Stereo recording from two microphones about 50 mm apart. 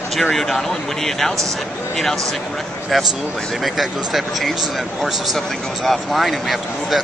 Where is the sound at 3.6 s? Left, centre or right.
Centre.